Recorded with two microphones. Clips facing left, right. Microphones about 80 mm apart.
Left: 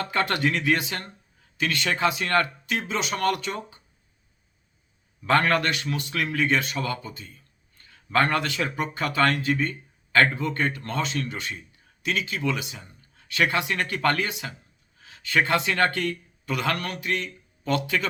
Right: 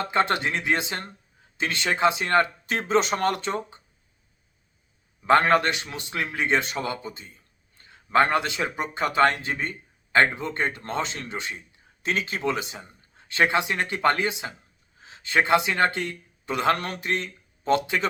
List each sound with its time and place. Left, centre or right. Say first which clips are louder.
0.0 s speech: right 1 dB; right
2.6 s speech: right 5 dB; right
5.2 s speech: right 3 dB; right
12.0 s speech: right 1 dB; right